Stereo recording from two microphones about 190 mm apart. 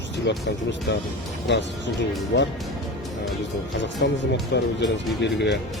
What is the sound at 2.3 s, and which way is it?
Speech, 65° left (ahead or behind).